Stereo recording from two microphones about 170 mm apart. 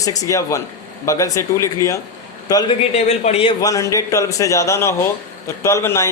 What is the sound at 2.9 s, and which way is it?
Speech, 40° left (ahead or behind).